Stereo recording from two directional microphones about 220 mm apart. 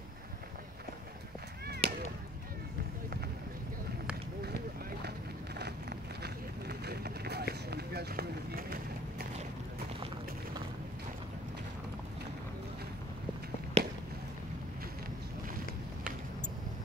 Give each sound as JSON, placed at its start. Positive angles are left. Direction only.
{"t": 1.8, "sound": "chop", "side_deg": -30}
{"t": 5.6, "sound": "run", "side_deg": -50}
{"t": 13.8, "sound": "fireworks", "side_deg": -30}